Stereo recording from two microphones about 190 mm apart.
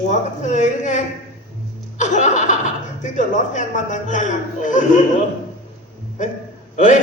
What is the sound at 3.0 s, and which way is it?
A man's voice, 40° left (ahead or behind).